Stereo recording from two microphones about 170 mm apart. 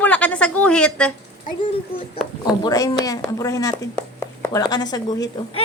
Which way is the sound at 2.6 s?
20° left (ahead or behind).